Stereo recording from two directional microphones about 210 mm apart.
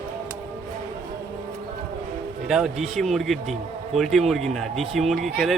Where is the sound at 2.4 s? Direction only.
5° right (ahead or behind).